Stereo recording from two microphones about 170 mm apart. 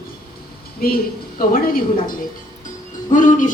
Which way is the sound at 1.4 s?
55° left (ahead or behind).